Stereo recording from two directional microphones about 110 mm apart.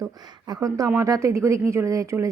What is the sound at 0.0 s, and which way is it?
Speech, 35° right (ahead or behind).